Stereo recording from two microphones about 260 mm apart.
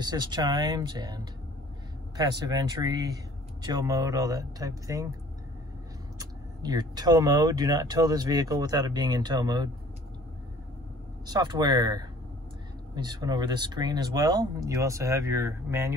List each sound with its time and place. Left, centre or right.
0.0 s speech: centre
6.1 s speech: centre
11.2 s speech: centre